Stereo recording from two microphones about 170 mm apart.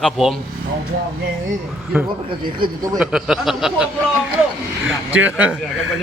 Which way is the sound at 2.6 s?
25° right (ahead or behind).